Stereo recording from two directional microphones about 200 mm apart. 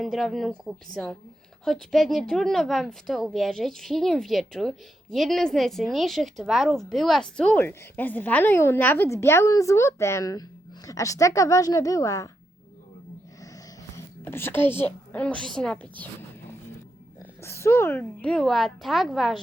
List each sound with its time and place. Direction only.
0.0 s a woman's voice: centre (ahead or behind); by 12.3 s 15° left (ahead or behind)
13.9 s a woman's voice: 10° left (ahead or behind)
17.4 s a woman's voice: 15° left (ahead or behind)